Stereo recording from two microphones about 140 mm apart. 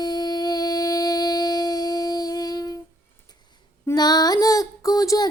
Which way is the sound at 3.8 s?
30° left (ahead or behind).